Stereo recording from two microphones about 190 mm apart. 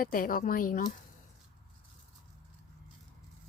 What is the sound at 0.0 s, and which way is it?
Speech, 45° left (ahead or behind).